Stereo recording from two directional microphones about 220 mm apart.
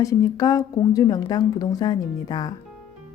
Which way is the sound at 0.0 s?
15° left (ahead or behind).